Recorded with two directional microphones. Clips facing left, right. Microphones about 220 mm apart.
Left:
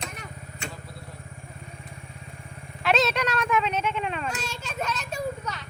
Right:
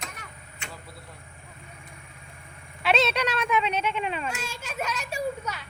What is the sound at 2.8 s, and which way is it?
A child's voice, centre (ahead or behind).